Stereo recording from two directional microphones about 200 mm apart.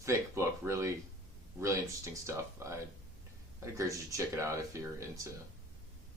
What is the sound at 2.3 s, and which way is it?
Speech, 15° right (ahead or behind).